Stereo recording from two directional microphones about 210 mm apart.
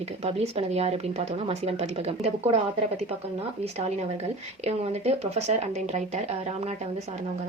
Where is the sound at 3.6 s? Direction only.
30° right (ahead or behind).